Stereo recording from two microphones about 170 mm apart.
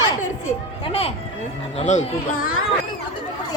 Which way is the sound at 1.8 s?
45° left (ahead or behind).